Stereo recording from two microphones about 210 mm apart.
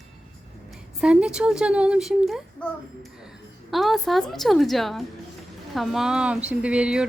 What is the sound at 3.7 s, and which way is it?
Speech, centre (ahead or behind).